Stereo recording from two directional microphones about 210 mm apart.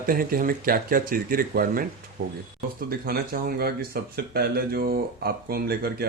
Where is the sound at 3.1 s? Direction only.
45° right (ahead or behind).